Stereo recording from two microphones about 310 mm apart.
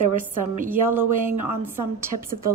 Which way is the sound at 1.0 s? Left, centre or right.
Right.